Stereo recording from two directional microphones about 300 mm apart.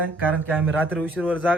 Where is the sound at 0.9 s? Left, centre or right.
Centre.